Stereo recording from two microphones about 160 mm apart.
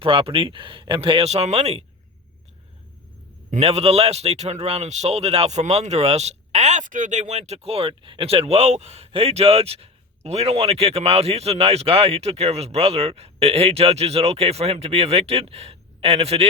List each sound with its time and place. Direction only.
0.0 s a man's voice: 35° right (ahead or behind)
3.5 s a man's voice: 40° right (ahead or behind)